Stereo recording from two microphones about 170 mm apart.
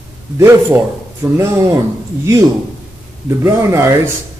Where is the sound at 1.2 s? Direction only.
15° right (ahead or behind).